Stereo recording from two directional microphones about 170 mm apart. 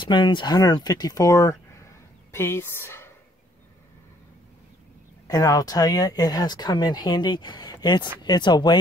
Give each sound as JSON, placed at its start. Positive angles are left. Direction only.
{"t": 0.0, "sound": "speech", "side_deg": 25}
{"t": 1.7, "sound": "a sound", "side_deg": 15}
{"t": 5.3, "sound": "speech", "side_deg": 20}